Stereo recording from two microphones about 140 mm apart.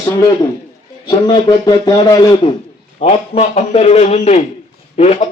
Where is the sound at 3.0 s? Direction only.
50° left (ahead or behind).